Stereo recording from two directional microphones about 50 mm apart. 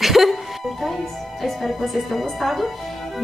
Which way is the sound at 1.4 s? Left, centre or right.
Centre.